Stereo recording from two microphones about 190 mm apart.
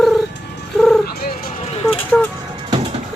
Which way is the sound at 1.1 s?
55° left (ahead or behind).